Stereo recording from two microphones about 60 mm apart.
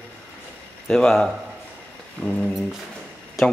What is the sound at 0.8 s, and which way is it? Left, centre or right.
Speech, centre.